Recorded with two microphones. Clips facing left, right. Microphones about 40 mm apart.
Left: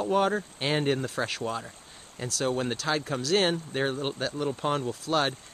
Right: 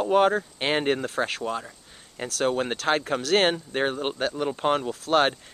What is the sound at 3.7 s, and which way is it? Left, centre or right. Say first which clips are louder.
Speech: right 3 dB; right.